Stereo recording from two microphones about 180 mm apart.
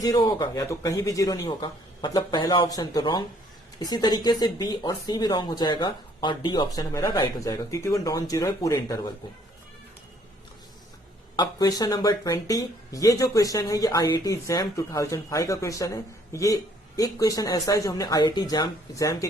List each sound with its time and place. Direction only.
0.0 s speech: 20° left (ahead or behind)
11.3 s speech: 20° left (ahead or behind)